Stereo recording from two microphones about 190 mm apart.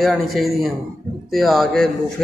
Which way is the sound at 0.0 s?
Centre (ahead or behind).